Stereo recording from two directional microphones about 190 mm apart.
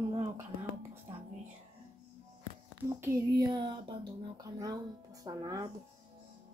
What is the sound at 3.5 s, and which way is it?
Speech, 25° right (ahead or behind).